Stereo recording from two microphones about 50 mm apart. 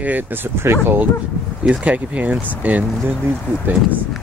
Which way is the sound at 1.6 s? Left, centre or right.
Right.